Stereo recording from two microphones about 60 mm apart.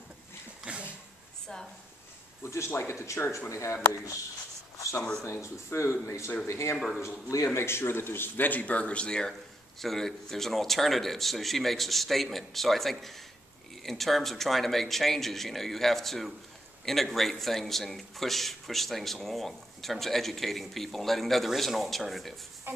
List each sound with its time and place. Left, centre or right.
2.4 s speech: left
4.7 s a sound: left
5.2 s speech: left; by 22.3 s centre